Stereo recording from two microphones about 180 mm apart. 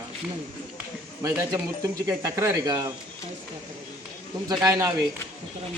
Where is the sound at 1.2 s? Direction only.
15° right (ahead or behind).